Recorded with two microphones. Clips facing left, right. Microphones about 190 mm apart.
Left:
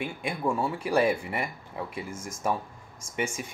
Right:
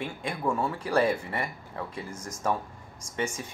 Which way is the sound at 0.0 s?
10° left (ahead or behind).